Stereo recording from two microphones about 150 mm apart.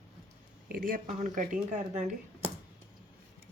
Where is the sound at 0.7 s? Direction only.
80° right; by 2.5 s 50° right (ahead or behind).